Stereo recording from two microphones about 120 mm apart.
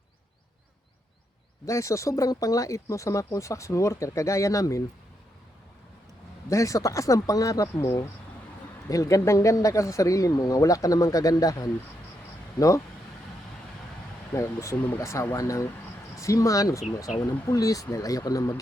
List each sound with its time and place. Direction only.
1.6 s speech: 25° left (ahead or behind)
6.5 s speech: 25° left (ahead or behind)
14.3 s speech: 25° left (ahead or behind)